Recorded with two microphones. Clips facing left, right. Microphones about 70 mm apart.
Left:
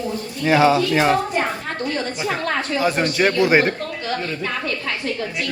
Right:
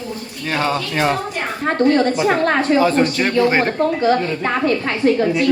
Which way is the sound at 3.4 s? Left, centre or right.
Centre.